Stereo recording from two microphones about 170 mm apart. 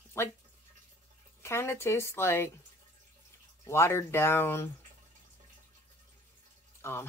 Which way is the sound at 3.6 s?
15° left (ahead or behind).